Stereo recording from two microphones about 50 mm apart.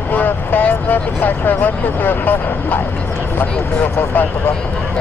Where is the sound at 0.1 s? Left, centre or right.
Left.